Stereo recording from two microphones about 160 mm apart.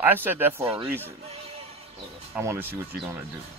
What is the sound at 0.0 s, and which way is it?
Speech, 10° right (ahead or behind).